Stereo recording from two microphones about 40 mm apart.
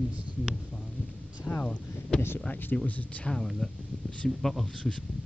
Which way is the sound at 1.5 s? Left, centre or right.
Left.